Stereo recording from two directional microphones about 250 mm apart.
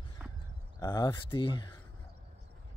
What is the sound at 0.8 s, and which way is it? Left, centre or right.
Speech, centre.